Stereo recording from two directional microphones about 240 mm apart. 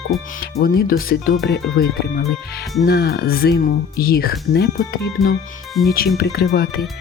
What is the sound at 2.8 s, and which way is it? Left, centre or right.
Speech, left.